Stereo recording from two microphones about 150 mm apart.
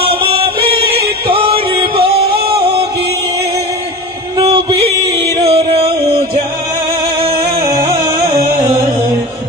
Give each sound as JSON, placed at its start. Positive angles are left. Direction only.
{"t": 0.0, "sound": "music", "side_deg": -40}
{"t": 4.5, "sound": "music", "side_deg": -35}
{"t": 7.8, "sound": "music", "side_deg": -25}